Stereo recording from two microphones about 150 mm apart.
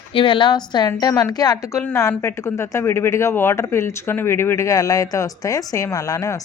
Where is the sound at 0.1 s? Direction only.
35° left (ahead or behind).